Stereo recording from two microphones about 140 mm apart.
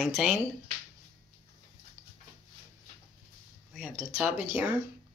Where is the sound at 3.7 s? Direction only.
5° right (ahead or behind).